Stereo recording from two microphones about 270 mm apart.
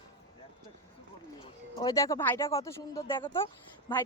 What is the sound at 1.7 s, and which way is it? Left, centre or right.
Speech, centre.